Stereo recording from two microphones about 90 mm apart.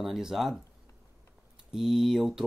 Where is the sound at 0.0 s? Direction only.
5° right (ahead or behind).